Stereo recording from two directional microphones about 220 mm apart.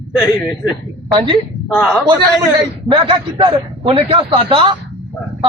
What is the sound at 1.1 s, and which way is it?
Speech, 20° right (ahead or behind).